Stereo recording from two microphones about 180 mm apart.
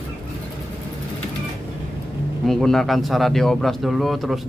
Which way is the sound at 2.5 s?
Centre (ahead or behind).